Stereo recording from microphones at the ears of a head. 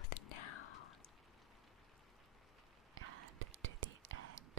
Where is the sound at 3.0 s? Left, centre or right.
Right.